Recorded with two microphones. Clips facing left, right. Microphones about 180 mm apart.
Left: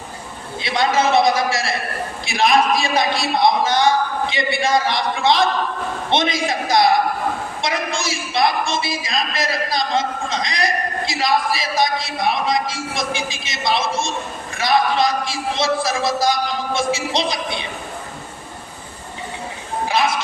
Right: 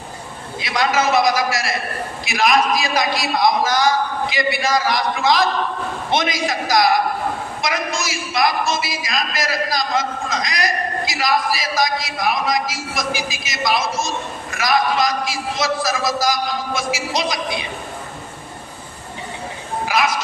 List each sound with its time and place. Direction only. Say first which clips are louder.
0.6 s a man's voice: left 1 dB; 25° left (ahead or behind)
19.8 s music: left 1 dB; 30° left (ahead or behind)